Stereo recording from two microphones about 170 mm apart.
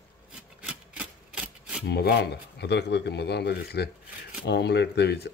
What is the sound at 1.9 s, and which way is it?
Speech, 75° left (ahead or behind).